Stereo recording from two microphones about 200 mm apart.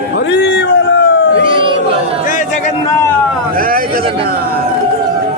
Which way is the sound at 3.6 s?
45° right (ahead or behind).